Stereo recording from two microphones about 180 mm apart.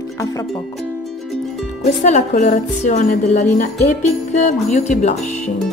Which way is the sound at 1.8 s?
40° left (ahead or behind).